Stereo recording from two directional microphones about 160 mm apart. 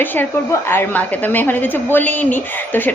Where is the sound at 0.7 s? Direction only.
10° left (ahead or behind).